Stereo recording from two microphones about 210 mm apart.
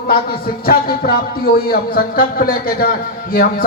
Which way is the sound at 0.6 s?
45° left (ahead or behind).